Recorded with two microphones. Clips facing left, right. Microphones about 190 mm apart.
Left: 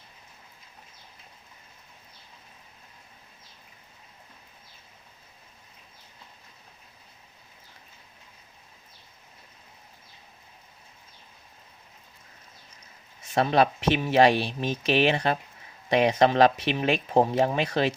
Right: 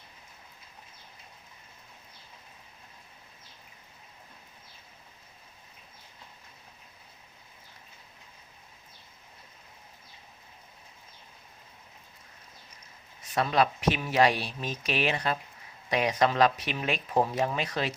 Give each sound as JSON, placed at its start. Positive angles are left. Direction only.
{"t": 13.2, "sound": "speech", "side_deg": 25}